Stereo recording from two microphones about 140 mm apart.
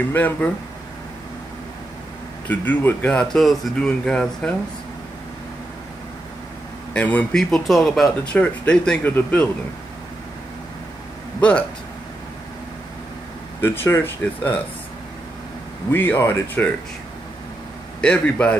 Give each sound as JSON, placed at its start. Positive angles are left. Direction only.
{"t": 0.1, "sound": "speech", "side_deg": 15}
{"t": 2.4, "sound": "speech", "side_deg": 10}
{"t": 6.9, "sound": "speech", "side_deg": 10}
{"t": 11.4, "sound": "speech", "side_deg": 10}
{"t": 13.6, "sound": "speech", "side_deg": 15}
{"t": 15.9, "sound": "speech", "side_deg": 15}
{"t": 18.0, "sound": "speech", "side_deg": 10}